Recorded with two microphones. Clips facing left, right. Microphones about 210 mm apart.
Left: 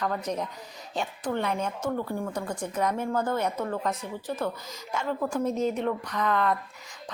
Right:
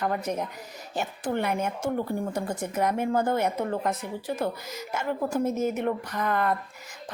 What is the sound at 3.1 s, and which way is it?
Speech, 30° right (ahead or behind).